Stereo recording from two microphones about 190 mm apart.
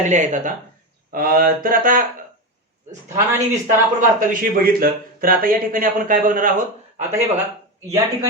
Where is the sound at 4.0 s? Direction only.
45° right (ahead or behind).